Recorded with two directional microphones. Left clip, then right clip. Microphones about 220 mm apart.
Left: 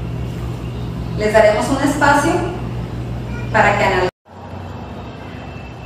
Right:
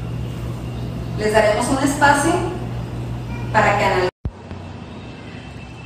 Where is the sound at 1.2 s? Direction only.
Centre (ahead or behind).